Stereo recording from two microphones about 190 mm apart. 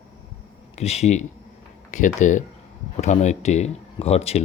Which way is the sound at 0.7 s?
35° left (ahead or behind).